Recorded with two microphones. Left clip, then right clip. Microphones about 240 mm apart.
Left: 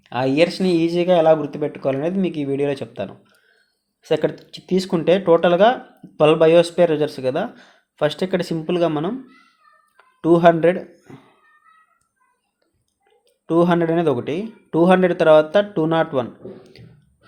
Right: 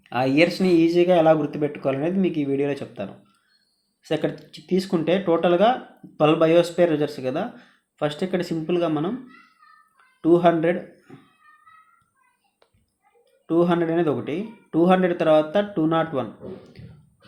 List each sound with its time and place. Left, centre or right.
0.0 s speech: left
10.2 s speech: left
13.5 s speech: left